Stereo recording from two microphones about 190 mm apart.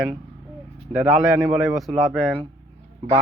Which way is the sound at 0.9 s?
5° right (ahead or behind).